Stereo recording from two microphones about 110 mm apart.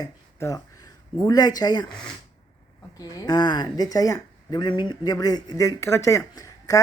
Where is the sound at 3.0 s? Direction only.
35° left (ahead or behind).